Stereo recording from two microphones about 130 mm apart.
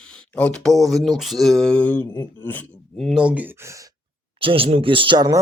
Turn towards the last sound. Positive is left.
turn(degrees=-35)  # may be behind; listen again after turning